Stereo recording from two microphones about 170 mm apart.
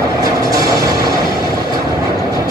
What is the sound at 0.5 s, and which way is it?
Music, 20° right (ahead or behind).